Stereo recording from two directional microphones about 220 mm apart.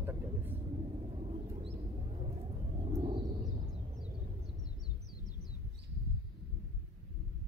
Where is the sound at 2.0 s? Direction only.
25° right (ahead or behind).